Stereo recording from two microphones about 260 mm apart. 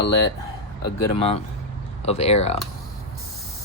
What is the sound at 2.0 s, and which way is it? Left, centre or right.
Speech, left.